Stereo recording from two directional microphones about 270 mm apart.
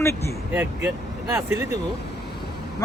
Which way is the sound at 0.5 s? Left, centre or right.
Centre.